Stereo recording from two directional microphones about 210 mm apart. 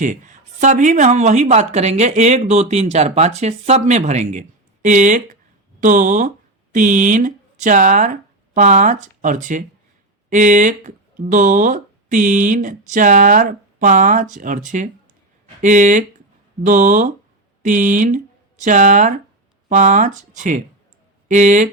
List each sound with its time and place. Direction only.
0.0 s speech: 40° right (ahead or behind)